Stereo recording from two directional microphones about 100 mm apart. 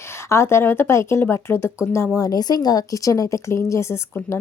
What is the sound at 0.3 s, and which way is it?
A woman's voice, 25° left (ahead or behind).